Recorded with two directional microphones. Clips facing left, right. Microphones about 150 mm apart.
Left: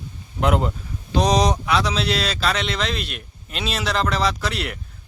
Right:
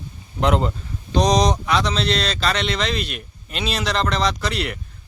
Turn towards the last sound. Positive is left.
turn(degrees=0)  # may be behind; listen again after turning